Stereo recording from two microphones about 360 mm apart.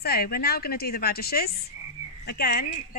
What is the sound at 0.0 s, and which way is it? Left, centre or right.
A woman's voice, left.